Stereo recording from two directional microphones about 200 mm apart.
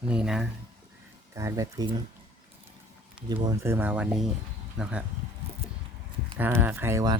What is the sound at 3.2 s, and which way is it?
Speech, 20° right (ahead or behind).